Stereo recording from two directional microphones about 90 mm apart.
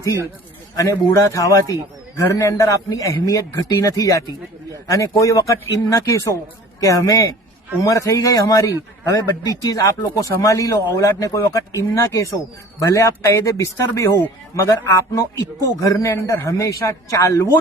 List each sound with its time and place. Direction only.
1.1 s speech: 35° left (ahead or behind)